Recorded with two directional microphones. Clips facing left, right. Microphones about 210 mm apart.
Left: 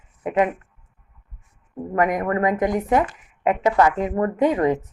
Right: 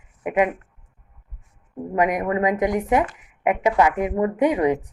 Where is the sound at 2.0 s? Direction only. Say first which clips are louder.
Even; 15° right (ahead or behind).